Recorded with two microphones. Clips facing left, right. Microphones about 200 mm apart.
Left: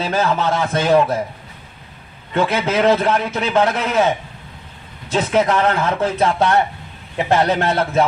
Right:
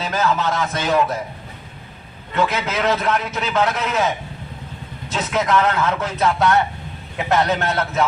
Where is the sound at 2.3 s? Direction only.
30° left (ahead or behind).